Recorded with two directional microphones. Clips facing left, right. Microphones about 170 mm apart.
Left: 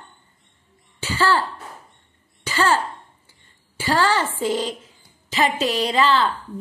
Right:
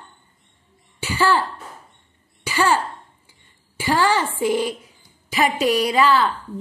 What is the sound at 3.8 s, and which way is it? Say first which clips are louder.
A woman's voice: right 1 dB; 15° right (ahead or behind).